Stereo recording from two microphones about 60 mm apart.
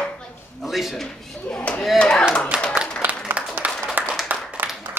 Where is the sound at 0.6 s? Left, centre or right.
Centre.